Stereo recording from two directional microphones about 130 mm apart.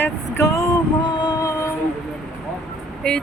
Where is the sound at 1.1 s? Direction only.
35° left (ahead or behind).